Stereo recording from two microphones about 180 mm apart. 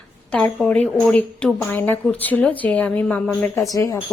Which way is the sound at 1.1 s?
5° left (ahead or behind).